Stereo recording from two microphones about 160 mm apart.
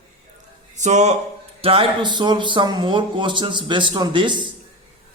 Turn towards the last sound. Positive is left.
turn(degrees=-30)  # may be behind; listen again after turning